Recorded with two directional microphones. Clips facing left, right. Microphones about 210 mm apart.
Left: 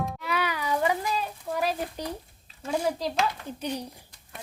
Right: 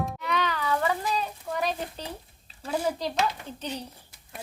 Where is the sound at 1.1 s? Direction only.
5° left (ahead or behind).